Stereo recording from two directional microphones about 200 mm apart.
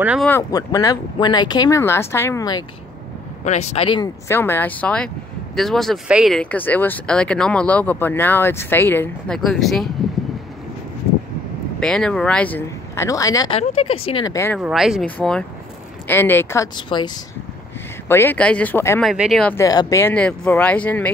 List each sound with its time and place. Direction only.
0.0 s speech: 5° right (ahead or behind)
0.3 s speech: 15° left (ahead or behind)
3.4 s speech: 35° left (ahead or behind)
4.3 s speech: 10° left (ahead or behind)
11.8 s speech: 5° left (ahead or behind)
14.6 s speech: centre (ahead or behind); by 17.1 s 20° left (ahead or behind)
18.0 s speech: 10° left (ahead or behind)
19.0 s speech: centre (ahead or behind)
19.5 s speech: 15° left (ahead or behind)